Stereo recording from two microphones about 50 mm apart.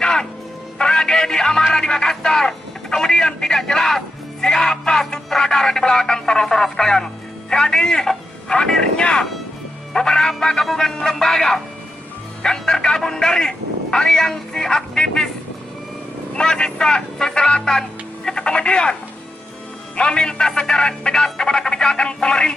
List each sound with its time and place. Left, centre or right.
0.0 s music: centre
0.7 s speech: centre
16.3 s speech: centre
20.0 s speech: centre